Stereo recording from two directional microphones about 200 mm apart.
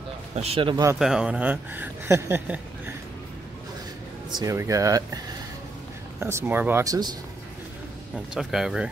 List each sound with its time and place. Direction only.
0.4 s speech: 30° right (ahead or behind)
0.9 s a woman's voice: centre (ahead or behind)
4.3 s a woman's voice: 20° right (ahead or behind)
8.4 s speech: centre (ahead or behind)